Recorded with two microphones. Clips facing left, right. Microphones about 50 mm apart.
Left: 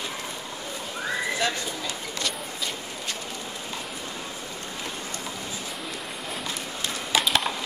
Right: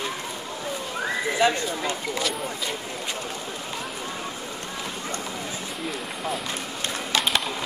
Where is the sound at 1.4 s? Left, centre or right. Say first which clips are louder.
Right 8 dB; centre.